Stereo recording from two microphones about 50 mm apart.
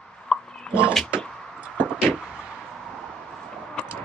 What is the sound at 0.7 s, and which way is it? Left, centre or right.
Speech, right.